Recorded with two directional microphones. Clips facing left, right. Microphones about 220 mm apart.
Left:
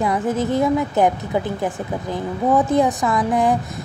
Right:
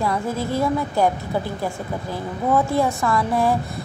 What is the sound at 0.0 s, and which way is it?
A woman's voice, 20° left (ahead or behind).